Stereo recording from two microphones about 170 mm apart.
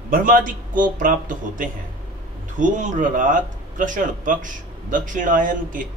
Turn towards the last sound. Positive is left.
turn(degrees=-50)  # may be behind; listen again after turning